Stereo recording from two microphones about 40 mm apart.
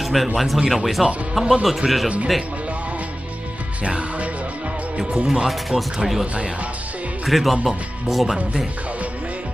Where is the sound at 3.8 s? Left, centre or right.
Right.